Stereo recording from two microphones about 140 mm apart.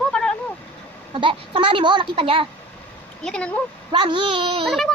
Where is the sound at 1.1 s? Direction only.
35° right (ahead or behind).